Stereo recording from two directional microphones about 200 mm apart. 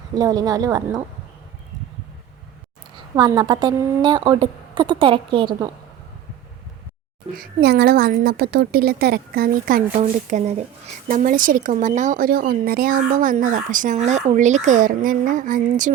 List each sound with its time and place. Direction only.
0.2 s a woman's voice: 20° right (ahead or behind)
3.2 s a woman's voice: 20° right (ahead or behind)
7.3 s a woman's voice: 55° right (ahead or behind)